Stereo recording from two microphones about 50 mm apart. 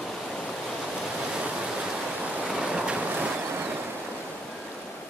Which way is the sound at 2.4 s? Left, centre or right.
Centre.